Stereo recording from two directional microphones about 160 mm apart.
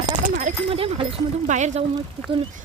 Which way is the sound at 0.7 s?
35° right (ahead or behind).